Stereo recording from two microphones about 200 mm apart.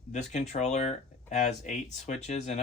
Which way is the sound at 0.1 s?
35° left (ahead or behind).